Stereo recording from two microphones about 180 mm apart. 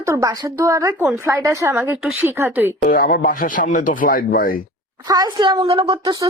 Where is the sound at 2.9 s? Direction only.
50° left (ahead or behind).